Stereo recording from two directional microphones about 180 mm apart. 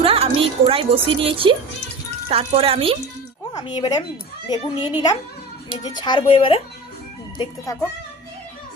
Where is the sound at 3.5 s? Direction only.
25° left (ahead or behind).